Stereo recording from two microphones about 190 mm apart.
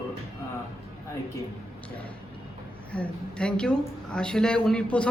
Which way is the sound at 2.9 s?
5° left (ahead or behind).